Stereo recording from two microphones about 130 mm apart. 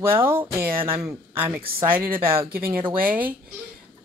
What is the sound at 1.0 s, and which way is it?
Speech, 20° right (ahead or behind).